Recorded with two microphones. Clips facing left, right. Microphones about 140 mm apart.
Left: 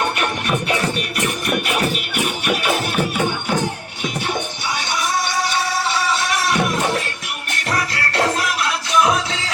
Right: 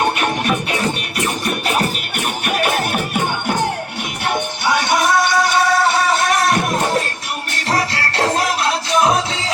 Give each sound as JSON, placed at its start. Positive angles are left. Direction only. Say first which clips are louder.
{"t": 1.5, "sound": "music", "louder": "even", "side_deg": -35}
{"t": 7.5, "sound": "music", "louder": "right 3 dB", "side_deg": -30}